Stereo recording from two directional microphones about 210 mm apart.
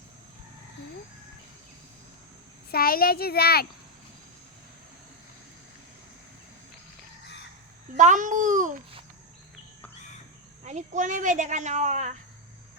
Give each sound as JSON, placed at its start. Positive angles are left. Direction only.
{"t": 2.7, "sound": "a child's voice", "side_deg": 45}
{"t": 7.9, "sound": "speech", "side_deg": -35}
{"t": 10.6, "sound": "speech", "side_deg": -35}